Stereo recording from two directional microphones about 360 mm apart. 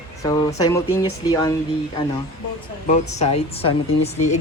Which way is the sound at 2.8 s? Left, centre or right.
Centre.